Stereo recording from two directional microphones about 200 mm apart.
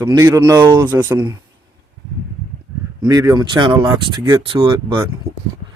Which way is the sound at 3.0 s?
20° right (ahead or behind).